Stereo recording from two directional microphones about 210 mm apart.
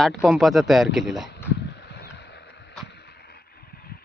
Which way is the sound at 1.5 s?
55° left (ahead or behind).